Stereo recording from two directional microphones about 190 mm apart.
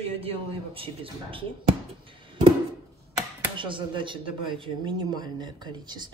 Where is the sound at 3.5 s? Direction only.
25° right (ahead or behind).